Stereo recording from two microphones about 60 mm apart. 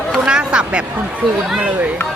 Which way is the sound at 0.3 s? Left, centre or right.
Centre.